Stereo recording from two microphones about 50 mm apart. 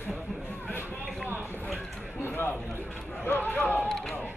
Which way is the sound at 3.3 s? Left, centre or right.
Left.